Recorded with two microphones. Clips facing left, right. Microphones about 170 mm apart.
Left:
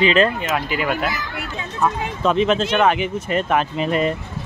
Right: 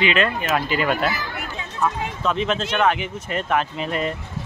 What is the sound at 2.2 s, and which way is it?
Speech, 20° left (ahead or behind).